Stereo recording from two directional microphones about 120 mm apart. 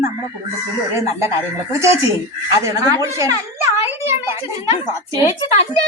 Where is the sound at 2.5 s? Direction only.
30° right (ahead or behind).